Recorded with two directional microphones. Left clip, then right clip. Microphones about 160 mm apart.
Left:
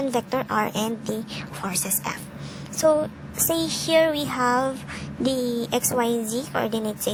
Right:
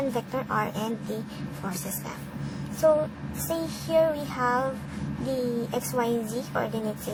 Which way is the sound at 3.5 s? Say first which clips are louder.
Left 4 dB; 45° left (ahead or behind).